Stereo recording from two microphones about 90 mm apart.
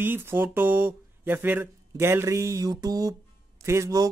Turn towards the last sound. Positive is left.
turn(degrees=-35)  # may be behind; listen again after turning